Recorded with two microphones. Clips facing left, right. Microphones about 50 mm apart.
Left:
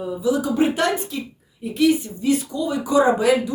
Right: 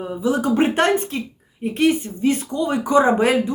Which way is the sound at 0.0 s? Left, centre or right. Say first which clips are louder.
Right 1 dB; right.